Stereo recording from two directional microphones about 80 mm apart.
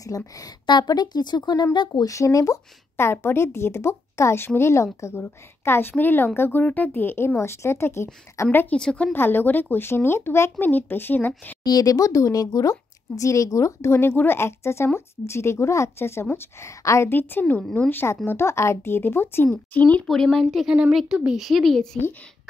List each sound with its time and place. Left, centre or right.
0.0 s speech: left
0.7 s speech: left
2.0 s speech: left
8.5 s speech: left
8.7 s a woman's voice: centre
9.1 s speech: left
11.6 s speech: left
17.1 s speech: left
20.1 s speech: centre